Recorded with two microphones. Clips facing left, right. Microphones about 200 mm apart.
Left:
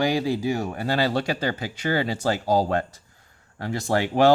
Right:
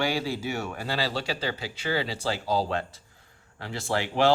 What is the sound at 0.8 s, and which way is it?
Speech, 50° left (ahead or behind).